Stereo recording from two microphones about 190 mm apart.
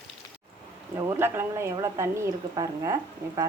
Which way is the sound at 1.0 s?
15° right (ahead or behind).